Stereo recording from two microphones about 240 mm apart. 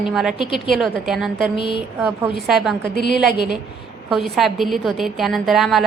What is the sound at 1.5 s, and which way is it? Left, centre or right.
Speech, left.